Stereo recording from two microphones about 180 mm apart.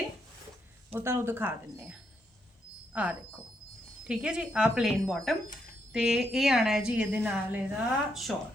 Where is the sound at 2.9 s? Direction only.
10° right (ahead or behind).